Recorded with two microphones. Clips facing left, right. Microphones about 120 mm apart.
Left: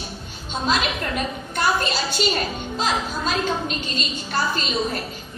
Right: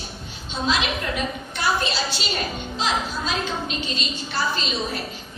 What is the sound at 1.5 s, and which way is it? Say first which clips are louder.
A woman's voice: left 2 dB; 50° left (ahead or behind).